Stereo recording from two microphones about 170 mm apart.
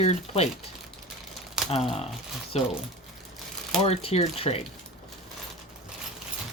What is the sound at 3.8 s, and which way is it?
Speech, 35° left (ahead or behind).